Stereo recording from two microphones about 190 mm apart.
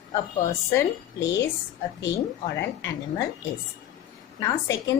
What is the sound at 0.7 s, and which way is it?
Speech, 15° left (ahead or behind).